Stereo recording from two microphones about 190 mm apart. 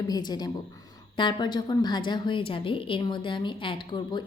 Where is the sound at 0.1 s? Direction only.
20° left (ahead or behind).